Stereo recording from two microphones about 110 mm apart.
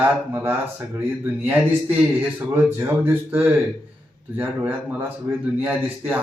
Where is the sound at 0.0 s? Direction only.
20° right (ahead or behind).